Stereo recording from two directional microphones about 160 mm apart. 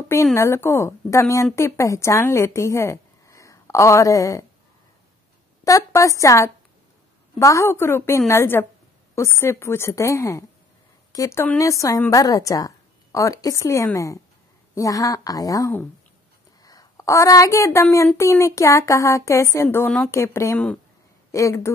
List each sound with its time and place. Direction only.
0.1 s a woman's voice: 15° left (ahead or behind)
5.6 s a woman's voice: 20° left (ahead or behind)